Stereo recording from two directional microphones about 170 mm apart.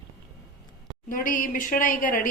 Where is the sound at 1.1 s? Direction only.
50° left (ahead or behind).